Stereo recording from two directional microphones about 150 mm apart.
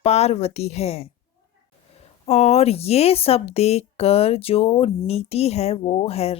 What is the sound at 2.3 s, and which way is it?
Speech, 45° left (ahead or behind).